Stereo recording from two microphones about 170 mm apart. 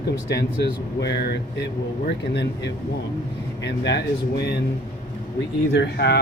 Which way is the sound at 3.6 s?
90° left.